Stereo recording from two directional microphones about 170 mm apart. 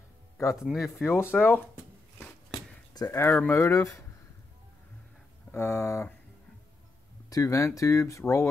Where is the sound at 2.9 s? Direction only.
20° left (ahead or behind).